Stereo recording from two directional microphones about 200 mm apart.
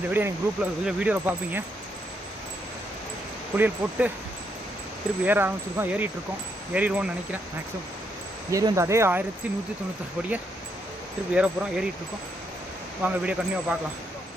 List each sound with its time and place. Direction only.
0.1 s speech: 10° right (ahead or behind)
3.6 s speech: 10° right (ahead or behind)
5.2 s speech: 10° right (ahead or behind)
8.4 s speech: 15° right (ahead or behind)
11.3 s speech: 5° right (ahead or behind)
13.0 s speech: 5° right (ahead or behind)